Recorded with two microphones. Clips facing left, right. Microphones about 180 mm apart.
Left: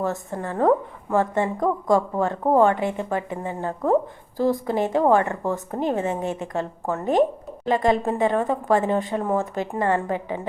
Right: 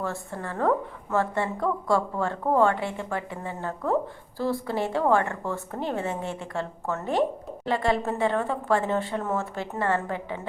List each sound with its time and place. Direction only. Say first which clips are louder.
0.0 s a woman's voice: left 5 dB; 20° left (ahead or behind)